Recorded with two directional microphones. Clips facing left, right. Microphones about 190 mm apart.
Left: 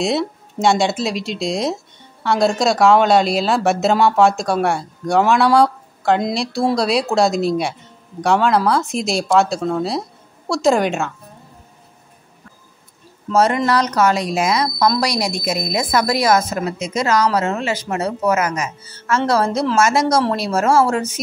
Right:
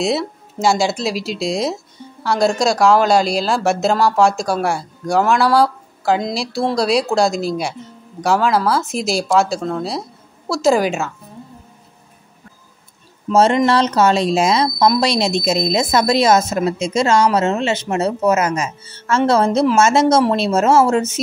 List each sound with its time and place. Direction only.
0.0 s speech: centre (ahead or behind)
13.3 s a woman's voice: 25° right (ahead or behind)